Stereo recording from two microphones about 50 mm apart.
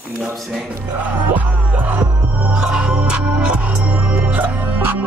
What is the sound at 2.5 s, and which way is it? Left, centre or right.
Music, right.